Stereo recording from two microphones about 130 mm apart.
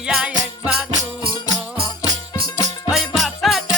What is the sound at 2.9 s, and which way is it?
Music, centre (ahead or behind).